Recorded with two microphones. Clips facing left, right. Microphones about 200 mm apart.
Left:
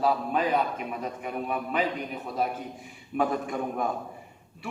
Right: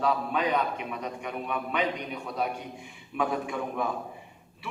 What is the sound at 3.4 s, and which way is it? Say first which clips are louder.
Speech: left 1 dB; 45° left (ahead or behind).